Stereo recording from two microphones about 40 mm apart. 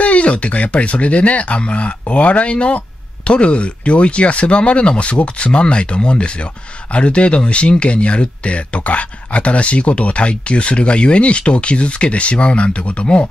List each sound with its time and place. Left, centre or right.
0.0 s speech: left